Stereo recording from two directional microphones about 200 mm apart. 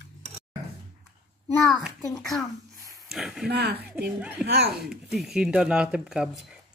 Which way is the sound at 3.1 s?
Centre (ahead or behind).